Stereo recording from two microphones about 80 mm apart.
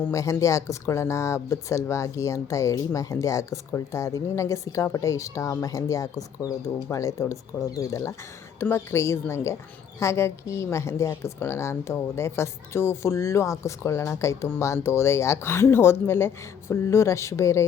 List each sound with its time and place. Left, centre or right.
0.1 s a woman's voice: left